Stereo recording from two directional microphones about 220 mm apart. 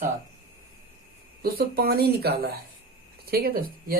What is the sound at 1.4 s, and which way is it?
Speech, 45° right (ahead or behind).